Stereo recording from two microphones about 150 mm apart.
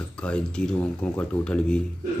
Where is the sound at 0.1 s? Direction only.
5° left (ahead or behind).